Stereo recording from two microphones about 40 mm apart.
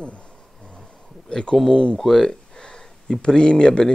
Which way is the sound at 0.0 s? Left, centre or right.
Left.